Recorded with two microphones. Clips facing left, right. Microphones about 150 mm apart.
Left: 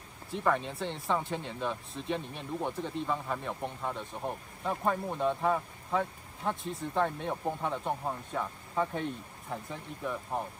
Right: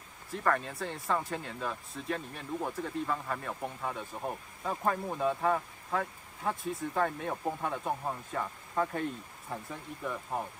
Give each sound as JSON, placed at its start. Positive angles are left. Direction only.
{"t": 0.3, "sound": "speech", "side_deg": 0}